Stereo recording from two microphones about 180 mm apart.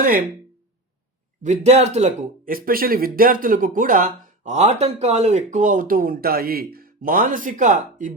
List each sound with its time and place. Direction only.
1.4 s speech: 40° right (ahead or behind)